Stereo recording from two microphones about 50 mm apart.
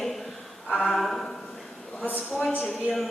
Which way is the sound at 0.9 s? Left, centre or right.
Centre.